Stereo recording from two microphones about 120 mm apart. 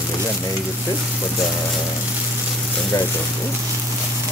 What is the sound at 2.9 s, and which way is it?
Speech, 30° left (ahead or behind).